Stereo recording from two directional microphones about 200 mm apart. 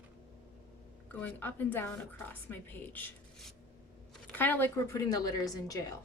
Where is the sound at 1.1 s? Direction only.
5° left (ahead or behind).